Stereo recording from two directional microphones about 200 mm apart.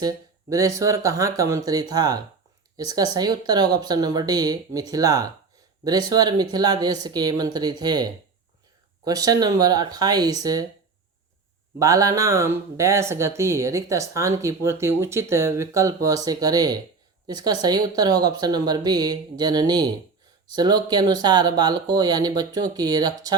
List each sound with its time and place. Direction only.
0.0 s speech: 15° right (ahead or behind)
11.8 s speech: 15° right (ahead or behind)